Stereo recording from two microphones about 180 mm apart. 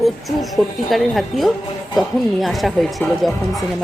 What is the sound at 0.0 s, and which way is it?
A woman's voice, centre (ahead or behind).